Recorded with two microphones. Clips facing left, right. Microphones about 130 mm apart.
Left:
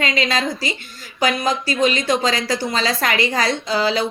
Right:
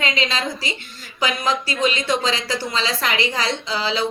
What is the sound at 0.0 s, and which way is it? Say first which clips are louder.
Speech: left 3 dB; 45° left (ahead or behind).